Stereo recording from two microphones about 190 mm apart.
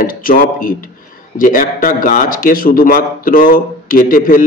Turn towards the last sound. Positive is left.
turn(degrees=45)  # may be behind; listen again after turning